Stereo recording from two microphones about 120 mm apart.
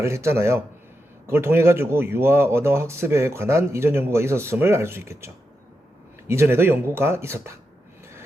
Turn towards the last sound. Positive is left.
turn(degrees=-20)  # may be behind; listen again after turning